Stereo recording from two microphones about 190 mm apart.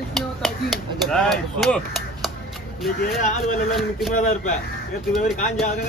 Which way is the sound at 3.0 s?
45° left (ahead or behind).